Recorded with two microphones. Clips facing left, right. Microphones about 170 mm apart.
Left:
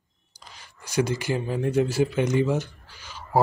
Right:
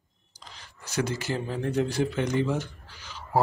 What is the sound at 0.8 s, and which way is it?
Speech, 10° left (ahead or behind).